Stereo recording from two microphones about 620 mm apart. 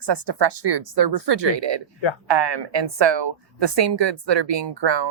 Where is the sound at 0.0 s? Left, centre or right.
Right.